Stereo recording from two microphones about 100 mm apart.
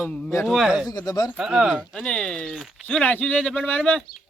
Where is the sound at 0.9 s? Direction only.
40° left (ahead or behind).